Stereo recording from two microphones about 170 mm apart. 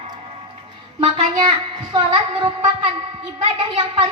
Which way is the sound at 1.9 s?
30° right (ahead or behind).